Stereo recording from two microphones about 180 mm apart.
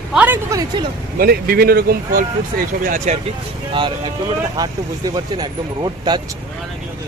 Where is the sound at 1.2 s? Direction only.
55° right (ahead or behind).